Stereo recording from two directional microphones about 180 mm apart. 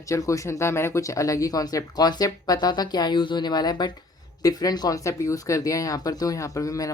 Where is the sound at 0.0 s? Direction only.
15° left (ahead or behind).